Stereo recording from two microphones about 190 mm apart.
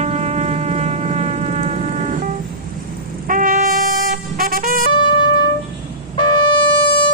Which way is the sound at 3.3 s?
45° right (ahead or behind).